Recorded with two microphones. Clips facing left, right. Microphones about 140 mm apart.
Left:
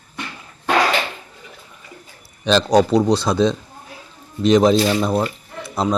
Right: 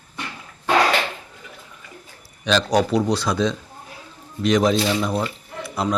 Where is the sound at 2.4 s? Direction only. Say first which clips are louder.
Left 4 dB; 30° left (ahead or behind).